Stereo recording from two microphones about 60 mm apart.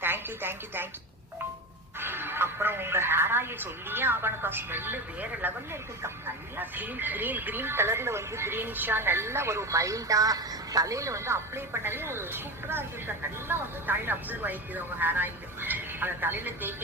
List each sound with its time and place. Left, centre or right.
0.0 s a woman's voice: right
2.0 s a woman's voice: right